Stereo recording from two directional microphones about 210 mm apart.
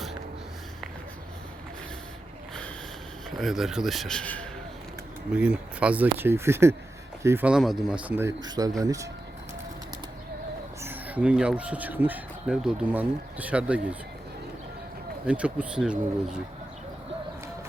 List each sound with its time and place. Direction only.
3.2 s a man's voice: centre (ahead or behind)
5.3 s speech: 5° right (ahead or behind)
10.8 s speech: 10° right (ahead or behind)
15.3 s a man's voice: 5° right (ahead or behind)